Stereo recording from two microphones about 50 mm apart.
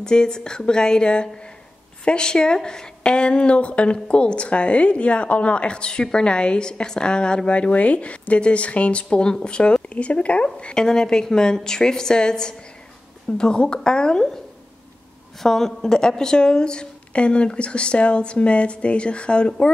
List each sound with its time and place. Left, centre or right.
0.0 s a woman's voice: centre
15.4 s a woman's voice: centre